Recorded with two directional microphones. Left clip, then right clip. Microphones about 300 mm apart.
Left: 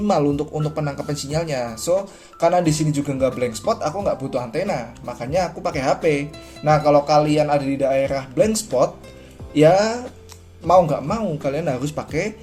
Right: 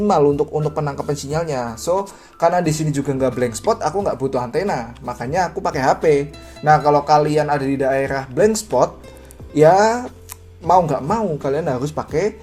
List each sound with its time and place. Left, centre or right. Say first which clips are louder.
0.1 s speech: right 4 dB; centre
6.0 s speech: right 4 dB; centre
6.7 s speech: right 2 dB; centre
11.3 s speech: right 3 dB; centre